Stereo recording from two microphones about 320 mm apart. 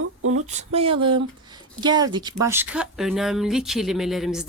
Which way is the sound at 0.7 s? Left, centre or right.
Centre.